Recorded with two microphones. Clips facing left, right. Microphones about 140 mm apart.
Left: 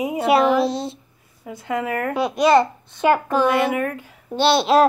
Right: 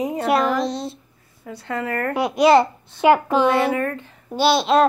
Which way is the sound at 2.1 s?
15° right (ahead or behind).